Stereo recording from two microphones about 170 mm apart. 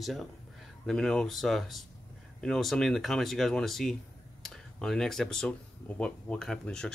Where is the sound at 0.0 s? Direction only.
Centre (ahead or behind).